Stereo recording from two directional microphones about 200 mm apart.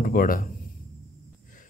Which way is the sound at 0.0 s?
45° left (ahead or behind).